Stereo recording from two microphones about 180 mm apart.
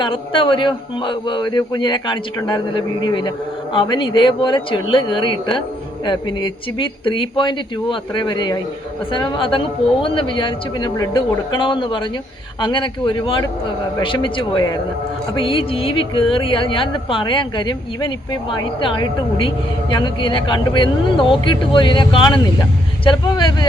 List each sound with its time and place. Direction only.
0.0 s speech: 30° left (ahead or behind)